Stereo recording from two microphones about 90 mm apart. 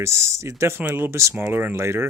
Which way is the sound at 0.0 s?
35° right (ahead or behind).